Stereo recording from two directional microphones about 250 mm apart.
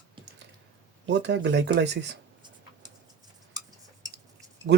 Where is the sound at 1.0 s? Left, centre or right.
Right.